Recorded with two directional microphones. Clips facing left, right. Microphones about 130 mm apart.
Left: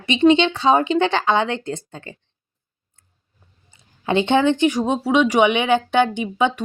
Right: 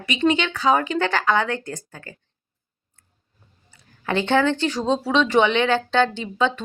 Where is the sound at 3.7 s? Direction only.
20° left (ahead or behind).